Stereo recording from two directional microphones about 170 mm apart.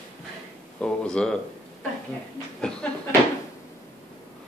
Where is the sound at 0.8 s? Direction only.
5° left (ahead or behind).